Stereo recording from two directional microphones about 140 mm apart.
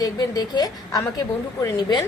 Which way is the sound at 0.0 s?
30° left (ahead or behind).